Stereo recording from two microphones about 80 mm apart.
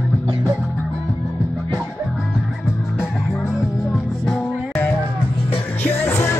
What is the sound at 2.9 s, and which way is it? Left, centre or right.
Music, centre.